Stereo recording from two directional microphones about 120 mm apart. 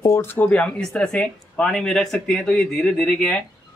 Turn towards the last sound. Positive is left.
turn(degrees=5)  # may be behind; listen again after turning